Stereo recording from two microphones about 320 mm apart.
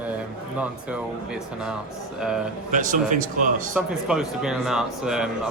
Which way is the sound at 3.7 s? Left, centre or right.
Centre.